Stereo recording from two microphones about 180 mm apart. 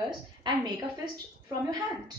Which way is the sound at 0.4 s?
25° right (ahead or behind).